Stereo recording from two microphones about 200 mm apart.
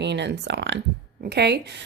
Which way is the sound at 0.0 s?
60° right (ahead or behind).